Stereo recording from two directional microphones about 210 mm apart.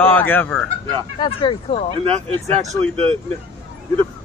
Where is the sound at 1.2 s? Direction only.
25° left (ahead or behind).